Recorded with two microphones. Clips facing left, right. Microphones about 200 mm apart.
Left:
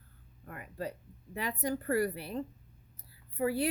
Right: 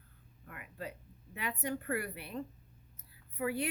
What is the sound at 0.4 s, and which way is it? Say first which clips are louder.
Speech: left 5 dB; 40° left (ahead or behind).